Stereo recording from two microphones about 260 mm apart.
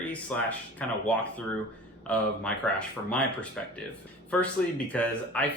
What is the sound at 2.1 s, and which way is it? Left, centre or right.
Speech, centre.